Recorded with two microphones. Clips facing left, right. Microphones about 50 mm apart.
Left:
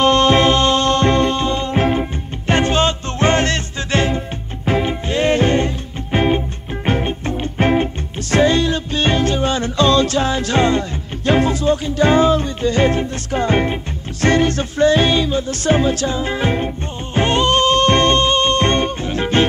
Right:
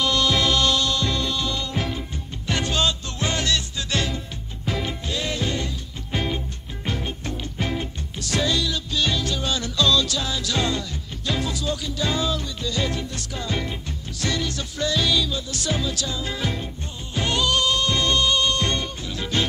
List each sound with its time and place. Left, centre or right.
0.0 s music: left